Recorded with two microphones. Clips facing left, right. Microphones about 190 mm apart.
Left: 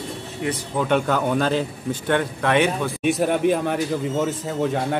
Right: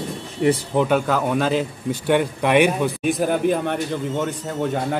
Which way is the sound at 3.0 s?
Centre (ahead or behind).